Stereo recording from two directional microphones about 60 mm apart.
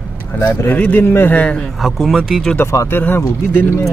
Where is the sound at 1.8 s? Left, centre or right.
Centre.